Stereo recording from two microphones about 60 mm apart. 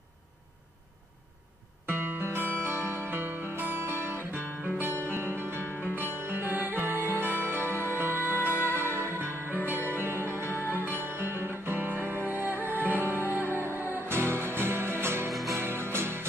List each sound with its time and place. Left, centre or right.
1.9 s music: right
5.6 s music: left
5.9 s music: right